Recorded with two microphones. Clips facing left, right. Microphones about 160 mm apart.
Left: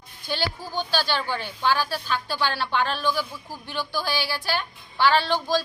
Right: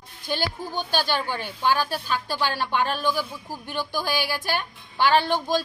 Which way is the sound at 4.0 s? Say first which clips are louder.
Right 2 dB; 50° right (ahead or behind).